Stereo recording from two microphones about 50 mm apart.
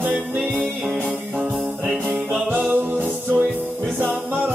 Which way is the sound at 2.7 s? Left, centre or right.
Right.